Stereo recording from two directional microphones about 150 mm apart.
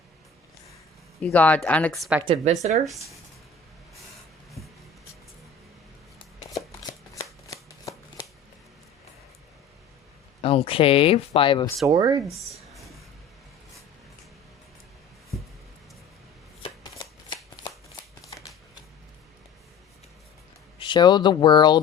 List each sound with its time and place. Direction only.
1.2 s speech: 10° left (ahead or behind)
2.2 s speech: 45° right (ahead or behind)
4.6 s a sound: centre (ahead or behind)
7.1 s shuffling cards: 20° left (ahead or behind)
10.4 s speech: 40° left (ahead or behind)
11.9 s speech: 30° right (ahead or behind)
16.6 s shuffling cards: 30° left (ahead or behind)
18.3 s shuffling cards: 20° left (ahead or behind)
20.7 s speech: 30° left (ahead or behind)